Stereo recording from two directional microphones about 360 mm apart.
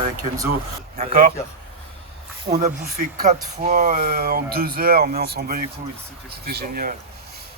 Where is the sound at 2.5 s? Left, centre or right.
Centre.